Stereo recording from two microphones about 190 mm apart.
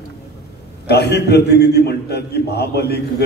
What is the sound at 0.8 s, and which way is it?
A man's voice, 60° left (ahead or behind).